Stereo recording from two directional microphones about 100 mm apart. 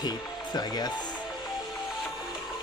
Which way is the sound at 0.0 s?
40° left (ahead or behind).